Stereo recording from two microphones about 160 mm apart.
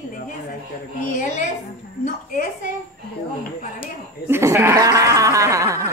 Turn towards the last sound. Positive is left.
turn(degrees=-20)  # may be behind; listen again after turning